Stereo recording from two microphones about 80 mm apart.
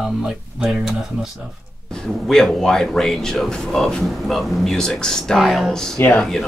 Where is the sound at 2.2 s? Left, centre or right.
Centre.